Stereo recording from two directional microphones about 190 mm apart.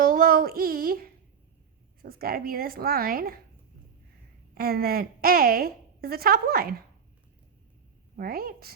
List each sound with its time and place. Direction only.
0.0 s a woman's voice: 50° right (ahead or behind)
4.5 s a woman's voice: 55° right (ahead or behind)
8.1 s a woman's voice: 50° right (ahead or behind)